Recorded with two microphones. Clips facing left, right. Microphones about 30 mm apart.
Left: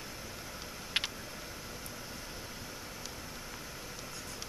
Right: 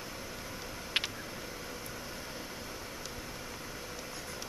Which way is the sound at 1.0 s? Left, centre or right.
Centre.